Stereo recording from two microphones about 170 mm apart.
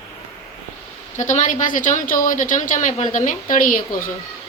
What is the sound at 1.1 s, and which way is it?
A woman's voice, 45° left (ahead or behind).